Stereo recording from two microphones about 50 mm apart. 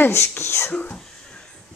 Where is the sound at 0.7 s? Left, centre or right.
Left.